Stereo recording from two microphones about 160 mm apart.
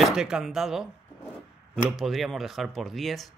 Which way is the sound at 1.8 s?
Centre (ahead or behind).